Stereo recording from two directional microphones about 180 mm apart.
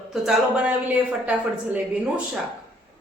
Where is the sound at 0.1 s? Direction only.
5° right (ahead or behind).